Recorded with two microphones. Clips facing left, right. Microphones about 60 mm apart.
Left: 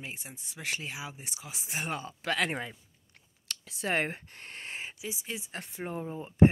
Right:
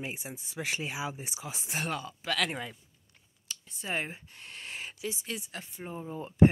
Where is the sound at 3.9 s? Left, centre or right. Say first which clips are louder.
Left 4 dB; left.